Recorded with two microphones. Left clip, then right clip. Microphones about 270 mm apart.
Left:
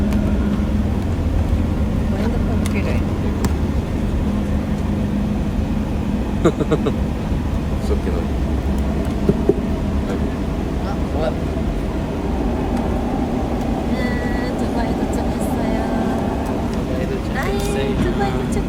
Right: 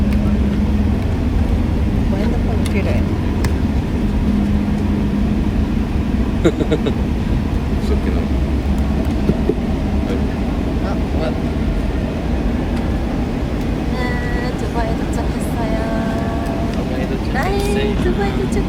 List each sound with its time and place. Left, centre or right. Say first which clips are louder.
6.4 s speech: right 1 dB; left